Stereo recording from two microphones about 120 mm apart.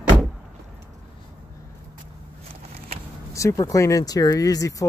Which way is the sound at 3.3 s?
25° left (ahead or behind).